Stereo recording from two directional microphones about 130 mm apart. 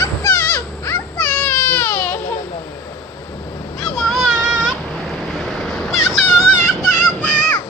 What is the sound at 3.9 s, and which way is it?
Child singing, centre (ahead or behind).